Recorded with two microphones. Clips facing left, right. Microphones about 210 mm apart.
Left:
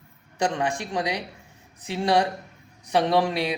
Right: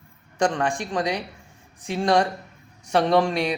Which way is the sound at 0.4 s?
20° left (ahead or behind).